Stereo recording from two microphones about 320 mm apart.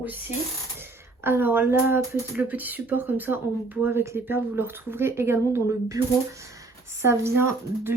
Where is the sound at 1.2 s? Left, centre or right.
Centre.